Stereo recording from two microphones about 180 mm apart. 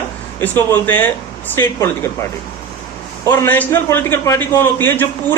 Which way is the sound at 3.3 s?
10° left (ahead or behind).